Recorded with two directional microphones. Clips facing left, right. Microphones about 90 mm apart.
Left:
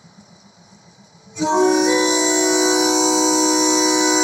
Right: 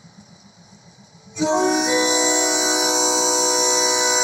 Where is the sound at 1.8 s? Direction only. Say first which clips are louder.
Left 3 dB; 25° right (ahead or behind).